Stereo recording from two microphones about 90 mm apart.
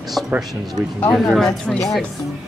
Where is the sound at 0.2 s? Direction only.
10° left (ahead or behind).